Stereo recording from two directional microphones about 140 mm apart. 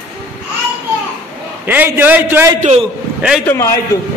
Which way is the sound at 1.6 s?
15° right (ahead or behind).